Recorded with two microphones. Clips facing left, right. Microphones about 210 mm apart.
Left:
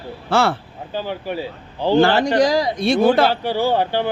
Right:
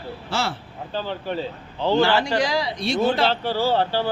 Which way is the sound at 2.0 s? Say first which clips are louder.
Left 6 dB; 45° left (ahead or behind).